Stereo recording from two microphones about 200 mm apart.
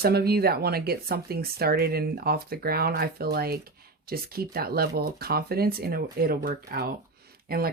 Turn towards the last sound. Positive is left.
turn(degrees=-50)  # may be behind; listen again after turning